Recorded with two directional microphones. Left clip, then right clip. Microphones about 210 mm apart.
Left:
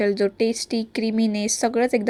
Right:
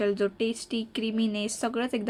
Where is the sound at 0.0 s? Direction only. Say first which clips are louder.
Left 6 dB; 20° left (ahead or behind).